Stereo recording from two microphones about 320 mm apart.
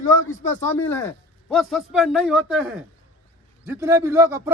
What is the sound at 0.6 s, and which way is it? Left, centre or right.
A man's voice, centre.